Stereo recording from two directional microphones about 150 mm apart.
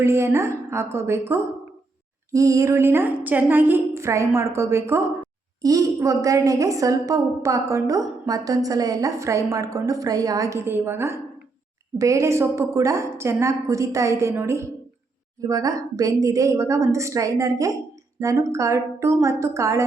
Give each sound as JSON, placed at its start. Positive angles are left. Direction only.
{"t": 0.0, "sound": "a woman's voice", "side_deg": -20}